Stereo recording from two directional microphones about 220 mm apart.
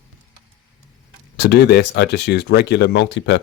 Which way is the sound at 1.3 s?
50° left (ahead or behind).